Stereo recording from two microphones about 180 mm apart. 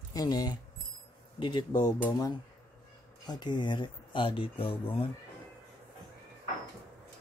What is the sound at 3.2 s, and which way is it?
Speech, 25° left (ahead or behind).